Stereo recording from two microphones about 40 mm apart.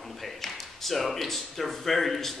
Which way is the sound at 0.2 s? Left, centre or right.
Centre.